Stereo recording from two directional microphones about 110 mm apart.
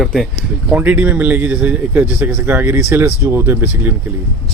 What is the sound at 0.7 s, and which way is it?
A man's voice, 15° right (ahead or behind).